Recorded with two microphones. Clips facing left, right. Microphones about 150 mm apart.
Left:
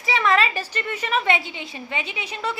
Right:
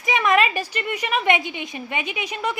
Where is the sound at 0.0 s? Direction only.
15° right (ahead or behind).